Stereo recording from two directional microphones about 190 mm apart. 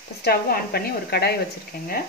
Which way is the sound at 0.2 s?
55° left (ahead or behind).